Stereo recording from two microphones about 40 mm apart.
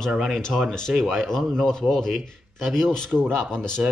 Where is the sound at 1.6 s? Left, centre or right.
Centre.